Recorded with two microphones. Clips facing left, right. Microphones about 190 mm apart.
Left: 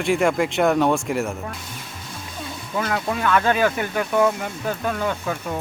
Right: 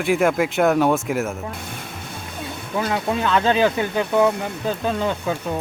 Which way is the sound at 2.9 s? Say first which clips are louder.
Even; 20° right (ahead or behind).